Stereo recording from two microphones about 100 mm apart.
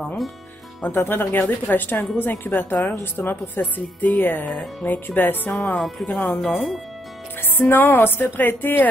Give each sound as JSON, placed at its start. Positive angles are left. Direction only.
{"t": 0.0, "sound": "music", "side_deg": 5}
{"t": 0.8, "sound": "speech", "side_deg": 25}
{"t": 5.8, "sound": "speech", "side_deg": 0}
{"t": 6.0, "sound": "speech", "side_deg": 15}
{"t": 6.4, "sound": "speech", "side_deg": 0}
{"t": 7.5, "sound": "speech", "side_deg": 20}